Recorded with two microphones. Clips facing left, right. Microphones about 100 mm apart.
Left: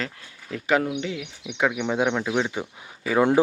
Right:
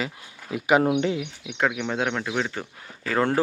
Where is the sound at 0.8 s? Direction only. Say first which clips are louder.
Right 6 dB; 45° right (ahead or behind).